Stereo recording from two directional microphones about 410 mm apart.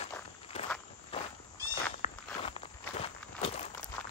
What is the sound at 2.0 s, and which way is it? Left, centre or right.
Walk, centre.